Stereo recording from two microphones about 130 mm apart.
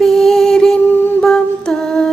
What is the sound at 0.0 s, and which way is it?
Music, centre (ahead or behind).